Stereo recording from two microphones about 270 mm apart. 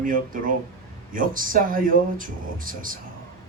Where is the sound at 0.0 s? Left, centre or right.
Right.